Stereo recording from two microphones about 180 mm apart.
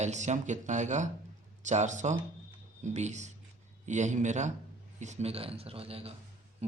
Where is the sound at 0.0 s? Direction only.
40° right (ahead or behind).